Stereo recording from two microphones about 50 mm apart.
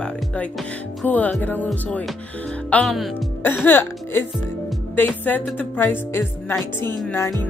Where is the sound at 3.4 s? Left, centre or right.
Left.